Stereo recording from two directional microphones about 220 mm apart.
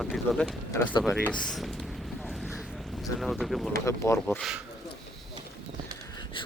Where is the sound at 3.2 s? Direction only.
Centre (ahead or behind).